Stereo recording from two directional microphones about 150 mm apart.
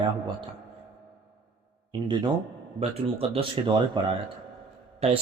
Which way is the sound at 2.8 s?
40° right (ahead or behind).